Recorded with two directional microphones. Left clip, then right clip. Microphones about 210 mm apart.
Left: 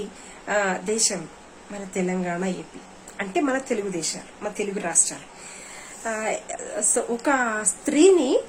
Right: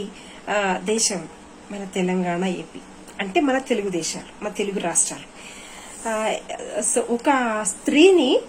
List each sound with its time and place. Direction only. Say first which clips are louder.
0.4 s speech: right 2 dB; 15° left (ahead or behind)
6.1 s speech: right 3 dB; 15° left (ahead or behind)